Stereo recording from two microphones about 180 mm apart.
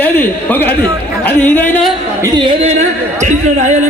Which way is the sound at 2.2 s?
25° right (ahead or behind).